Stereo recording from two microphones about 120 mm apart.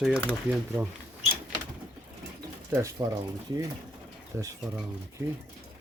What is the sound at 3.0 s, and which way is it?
Speech, 25° right (ahead or behind).